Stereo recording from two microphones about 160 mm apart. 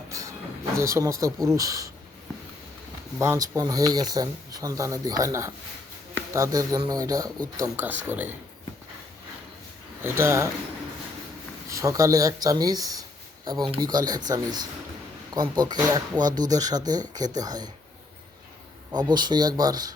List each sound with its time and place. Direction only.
0.1 s a sound: 20° right (ahead or behind)
0.8 s speech: 20° right (ahead or behind)
3.2 s speech: 20° right (ahead or behind)
10.0 s speech: 15° right (ahead or behind)
11.7 s speech: 20° right (ahead or behind)
18.9 s speech: 25° right (ahead or behind)